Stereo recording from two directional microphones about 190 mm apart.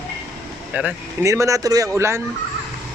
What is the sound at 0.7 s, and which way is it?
Speech, 10° right (ahead or behind).